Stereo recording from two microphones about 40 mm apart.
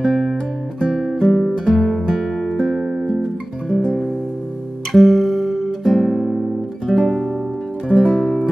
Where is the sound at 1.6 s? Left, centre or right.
Centre.